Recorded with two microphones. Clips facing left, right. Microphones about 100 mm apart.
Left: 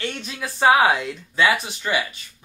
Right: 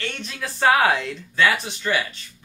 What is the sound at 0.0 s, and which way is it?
Speech, 15° left (ahead or behind).